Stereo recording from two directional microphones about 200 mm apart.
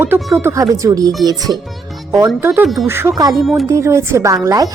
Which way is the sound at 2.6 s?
Centre (ahead or behind).